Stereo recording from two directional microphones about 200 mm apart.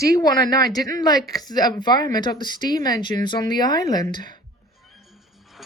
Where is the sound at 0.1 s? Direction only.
20° left (ahead or behind).